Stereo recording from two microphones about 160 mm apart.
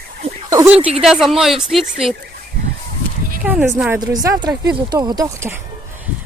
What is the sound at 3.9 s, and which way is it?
Speech, 25° right (ahead or behind).